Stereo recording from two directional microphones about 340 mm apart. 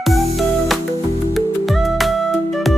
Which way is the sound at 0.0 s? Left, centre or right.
Centre.